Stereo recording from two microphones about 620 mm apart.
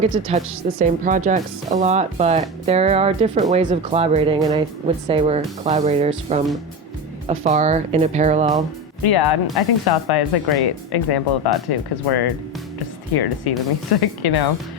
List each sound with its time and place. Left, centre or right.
0.0 s speech: centre
9.0 s speech: left